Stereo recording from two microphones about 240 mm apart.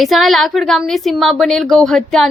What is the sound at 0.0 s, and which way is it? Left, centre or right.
A woman's voice, centre.